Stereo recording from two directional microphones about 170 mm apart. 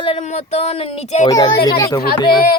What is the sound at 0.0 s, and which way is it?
Speech, 40° left (ahead or behind).